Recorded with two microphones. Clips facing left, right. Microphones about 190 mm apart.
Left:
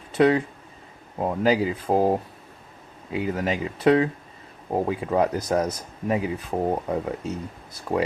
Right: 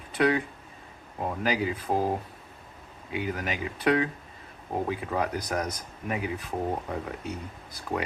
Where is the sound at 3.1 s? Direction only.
30° left (ahead or behind).